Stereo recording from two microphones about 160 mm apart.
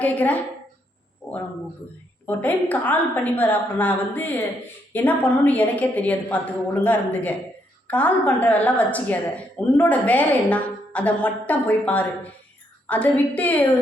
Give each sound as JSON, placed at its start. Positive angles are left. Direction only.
{"t": 0.0, "sound": "a woman's voice", "side_deg": 10}
{"t": 1.2, "sound": "a sound", "side_deg": 10}
{"t": 2.2, "sound": "a woman's voice", "side_deg": 10}